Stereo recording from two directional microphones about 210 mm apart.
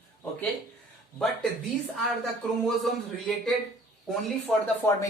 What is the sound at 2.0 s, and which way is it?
Speech, centre (ahead or behind).